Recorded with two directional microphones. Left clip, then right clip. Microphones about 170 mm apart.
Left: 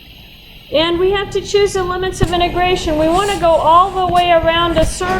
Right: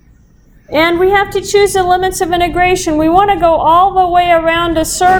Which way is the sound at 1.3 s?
30° right (ahead or behind).